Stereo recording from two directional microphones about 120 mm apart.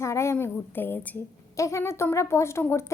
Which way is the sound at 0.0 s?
25° left (ahead or behind).